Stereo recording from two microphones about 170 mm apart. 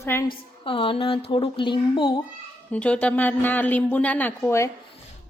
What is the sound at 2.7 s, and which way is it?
A woman's voice, 5° left (ahead or behind).